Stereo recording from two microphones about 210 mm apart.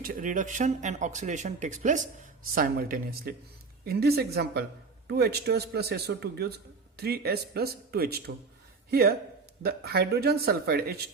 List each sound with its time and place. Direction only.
0.0 s speech: 40° right (ahead or behind)